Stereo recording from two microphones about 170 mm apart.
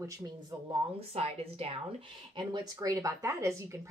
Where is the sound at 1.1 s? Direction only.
35° right (ahead or behind).